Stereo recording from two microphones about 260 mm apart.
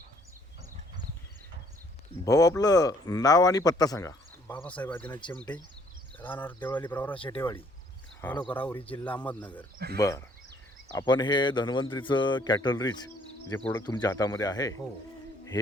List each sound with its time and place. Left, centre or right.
2.2 s speech: centre
7.1 s speech: centre
9.7 s speech: right
10.0 s speech: centre